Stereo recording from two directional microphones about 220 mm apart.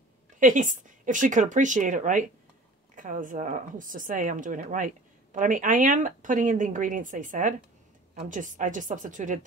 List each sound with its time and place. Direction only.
0.4 s speech: 35° right (ahead or behind)